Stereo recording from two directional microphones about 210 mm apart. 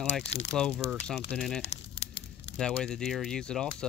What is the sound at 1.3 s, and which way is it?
Speech, centre (ahead or behind).